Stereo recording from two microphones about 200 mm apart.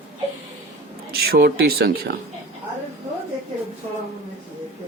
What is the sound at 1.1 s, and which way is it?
Speech, 50° right (ahead or behind).